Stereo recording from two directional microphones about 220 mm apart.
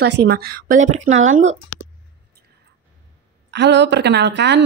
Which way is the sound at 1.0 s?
60° right (ahead or behind).